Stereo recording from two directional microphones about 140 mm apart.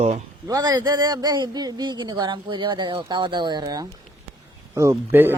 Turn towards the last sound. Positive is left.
turn(degrees=-15)  # may be behind; listen again after turning